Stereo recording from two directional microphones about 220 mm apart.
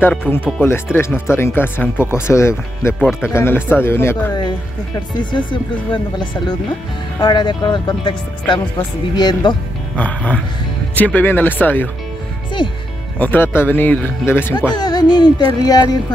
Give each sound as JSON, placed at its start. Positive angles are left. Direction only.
{"t": 0.5, "sound": "speech", "side_deg": 10}
{"t": 7.2, "sound": "speech", "side_deg": 20}
{"t": 9.9, "sound": "speech", "side_deg": 5}
{"t": 13.2, "sound": "speech", "side_deg": 10}